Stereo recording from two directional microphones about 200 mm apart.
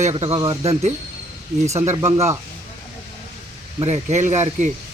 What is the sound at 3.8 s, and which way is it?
Speech, 35° right (ahead or behind).